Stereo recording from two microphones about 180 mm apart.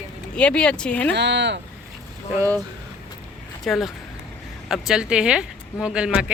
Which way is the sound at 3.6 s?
Centre (ahead or behind).